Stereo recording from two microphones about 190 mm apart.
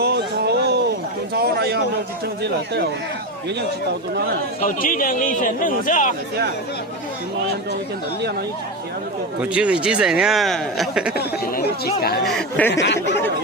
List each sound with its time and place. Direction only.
0.0 s a sound: 60° right (ahead or behind)
4.6 s speech: 45° left (ahead or behind)
9.4 s speech: 5° right (ahead or behind)
11.2 s chatter: 55° left (ahead or behind)
12.2 s speech: centre (ahead or behind)
12.7 s speech: 65° left (ahead or behind)